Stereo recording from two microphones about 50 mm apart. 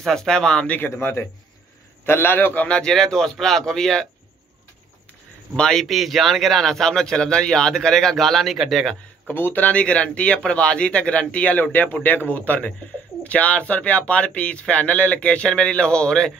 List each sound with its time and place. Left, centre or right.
0.0 s speech: centre
0.7 s a man's voice: left
2.7 s speech: centre
5.6 s speech: centre
5.9 s a man's voice: centre
9.3 s speech: left; by 16.3 s centre